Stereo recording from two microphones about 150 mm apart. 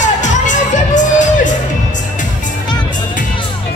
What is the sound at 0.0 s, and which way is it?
Music, 55° left (ahead or behind).